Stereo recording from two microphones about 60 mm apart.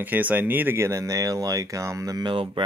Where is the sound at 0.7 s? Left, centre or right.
Right.